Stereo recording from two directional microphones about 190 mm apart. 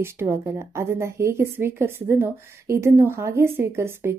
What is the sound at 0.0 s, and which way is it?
A woman's voice, 15° right (ahead or behind).